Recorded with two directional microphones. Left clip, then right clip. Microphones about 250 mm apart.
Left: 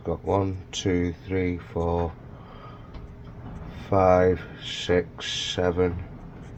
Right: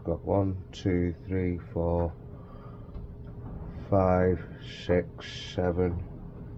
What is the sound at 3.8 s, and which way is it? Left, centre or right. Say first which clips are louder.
Speech: left 6 dB; centre.